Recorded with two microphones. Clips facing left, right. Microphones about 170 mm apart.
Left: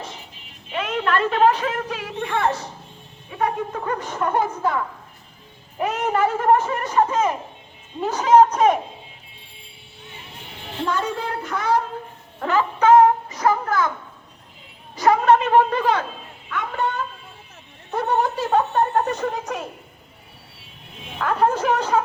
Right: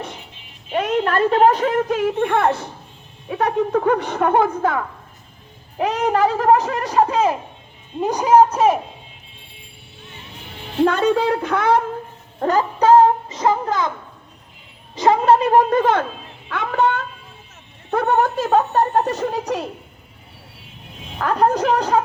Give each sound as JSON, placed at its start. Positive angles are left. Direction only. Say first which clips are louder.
{"t": 0.7, "sound": "a sound", "louder": "right 6 dB", "side_deg": -40}
{"t": 1.0, "sound": "speech", "louder": "right 2 dB", "side_deg": -40}
{"t": 3.2, "sound": "speech", "louder": "right 5 dB", "side_deg": -70}
{"t": 5.9, "sound": "a woman's voice", "louder": "right 3 dB", "side_deg": -35}
{"t": 8.0, "sound": "a man's voice", "louder": "right 1 dB", "side_deg": -15}
{"t": 10.8, "sound": "speech", "louder": "right 8 dB", "side_deg": -70}
{"t": 12.4, "sound": "a sound", "louder": "right 2 dB", "side_deg": -40}
{"t": 13.2, "sound": "speech", "louder": "right 2 dB", "side_deg": -20}
{"t": 14.9, "sound": "a woman's voice", "louder": "right 1 dB", "side_deg": -25}
{"t": 16.5, "sound": "speech", "louder": "right 6 dB", "side_deg": -75}
{"t": 17.9, "sound": "a woman's voice", "louder": "right 4 dB", "side_deg": -55}
{"t": 21.2, "sound": "a woman's voice", "louder": "right 3 dB", "side_deg": -40}